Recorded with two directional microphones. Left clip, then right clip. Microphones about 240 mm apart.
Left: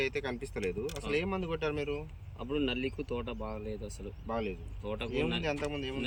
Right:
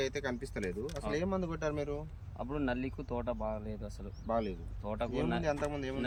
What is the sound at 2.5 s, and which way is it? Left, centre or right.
Speech, centre.